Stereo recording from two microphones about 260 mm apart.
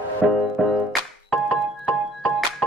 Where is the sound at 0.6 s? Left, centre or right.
Centre.